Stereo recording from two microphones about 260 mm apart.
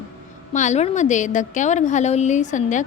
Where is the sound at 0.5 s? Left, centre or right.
Left.